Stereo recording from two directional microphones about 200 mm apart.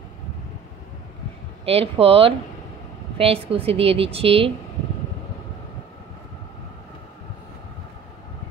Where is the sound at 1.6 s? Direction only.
30° right (ahead or behind).